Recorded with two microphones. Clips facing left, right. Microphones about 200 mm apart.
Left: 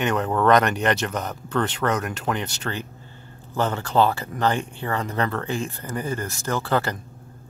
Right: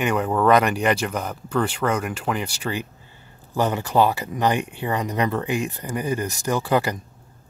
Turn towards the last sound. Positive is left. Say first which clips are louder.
# right 2 dB
turn(degrees=-15)  # may be behind; listen again after turning